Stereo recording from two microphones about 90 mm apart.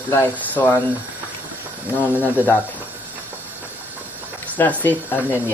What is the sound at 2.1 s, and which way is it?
Speech, 20° left (ahead or behind).